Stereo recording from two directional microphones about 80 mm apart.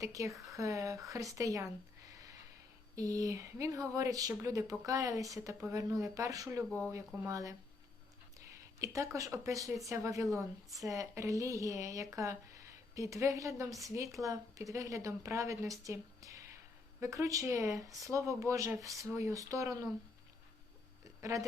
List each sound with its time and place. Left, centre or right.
0.0 s a woman's voice: right
2.0 s a sound: right
2.9 s a woman's voice: right
6.7 s speech: centre
7.3 s a woman's voice: right
8.8 s a woman's voice: right
21.2 s speech: right